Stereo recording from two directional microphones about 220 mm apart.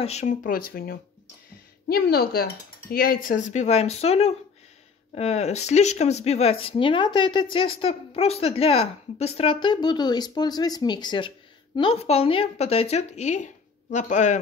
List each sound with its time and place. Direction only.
0.0 s speech: 30° left (ahead or behind)
1.9 s speech: 45° left (ahead or behind)